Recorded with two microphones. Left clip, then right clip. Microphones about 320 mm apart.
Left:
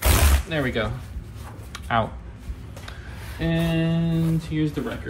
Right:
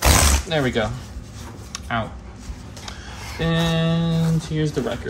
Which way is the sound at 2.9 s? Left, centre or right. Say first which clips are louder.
Right 6 dB; centre.